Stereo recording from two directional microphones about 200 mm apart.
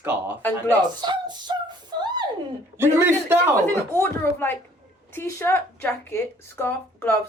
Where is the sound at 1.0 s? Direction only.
20° right (ahead or behind).